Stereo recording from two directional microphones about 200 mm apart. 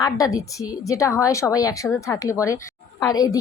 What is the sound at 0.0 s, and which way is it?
A woman's voice, 15° left (ahead or behind).